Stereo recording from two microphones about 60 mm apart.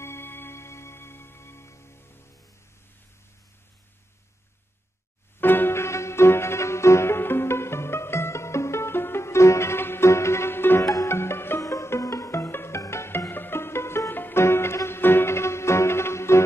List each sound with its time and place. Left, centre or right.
0.0 s music: left
5.4 s music: left
10.8 s music: left
11.1 s music: left
11.6 s music: left
12.4 s music: left
13.3 s music: left